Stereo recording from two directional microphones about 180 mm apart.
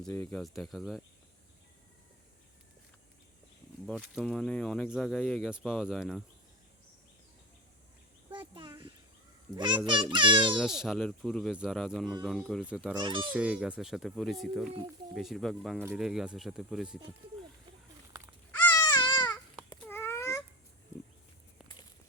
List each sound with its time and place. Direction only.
0.0 s speech: 10° left (ahead or behind)
3.8 s speech: 5° right (ahead or behind)
8.3 s a sound: 25° right (ahead or behind)
9.8 s a child's voice: 25° right (ahead or behind)
10.6 s speech: 5° right (ahead or behind)
12.9 s a child's voice: 25° right (ahead or behind)
13.3 s speech: 5° right (ahead or behind)
18.7 s baby cry: 20° left (ahead or behind)
19.8 s babbling: 10° left (ahead or behind)